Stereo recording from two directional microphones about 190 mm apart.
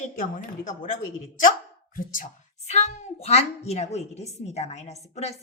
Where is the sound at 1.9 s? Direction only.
45° left (ahead or behind).